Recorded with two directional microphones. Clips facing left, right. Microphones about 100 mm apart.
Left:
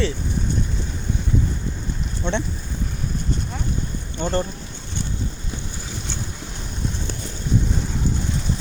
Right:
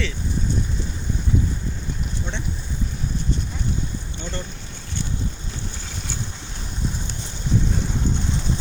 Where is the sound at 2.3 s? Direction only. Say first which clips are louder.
Left 11 dB; 75° left (ahead or behind).